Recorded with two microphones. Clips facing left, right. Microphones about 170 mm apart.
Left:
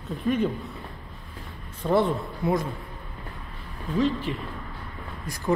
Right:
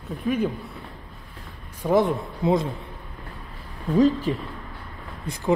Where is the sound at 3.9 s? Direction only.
40° right (ahead or behind).